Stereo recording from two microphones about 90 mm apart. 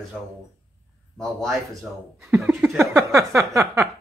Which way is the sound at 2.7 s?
35° right (ahead or behind).